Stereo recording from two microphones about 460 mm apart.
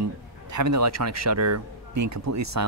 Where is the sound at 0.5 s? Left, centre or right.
Right.